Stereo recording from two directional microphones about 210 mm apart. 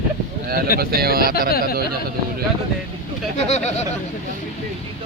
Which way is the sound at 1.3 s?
45° left (ahead or behind).